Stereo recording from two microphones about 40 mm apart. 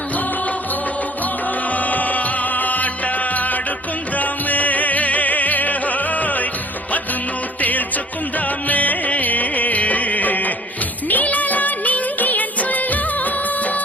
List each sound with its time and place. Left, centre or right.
1.7 s music: left
7.6 s music: left
11.1 s music of bollywood: left